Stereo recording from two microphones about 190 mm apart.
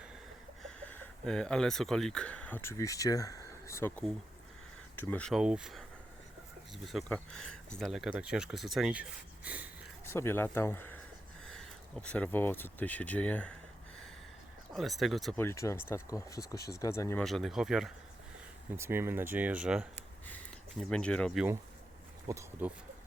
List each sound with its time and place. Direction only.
0.6 s speech: 5° left (ahead or behind)
6.8 s speech: centre (ahead or behind)
10.1 s speech: 10° left (ahead or behind)
14.7 s speech: centre (ahead or behind)
15.4 s speech: 15° left (ahead or behind)
17.2 s speech: centre (ahead or behind)
20.0 s a sound: 10° left (ahead or behind)
22.3 s speech: 15° right (ahead or behind)